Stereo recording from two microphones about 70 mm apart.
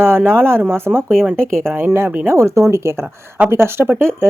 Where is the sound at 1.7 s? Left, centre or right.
Right.